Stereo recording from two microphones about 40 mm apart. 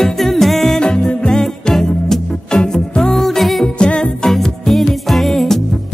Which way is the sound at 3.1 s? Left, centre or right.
Centre.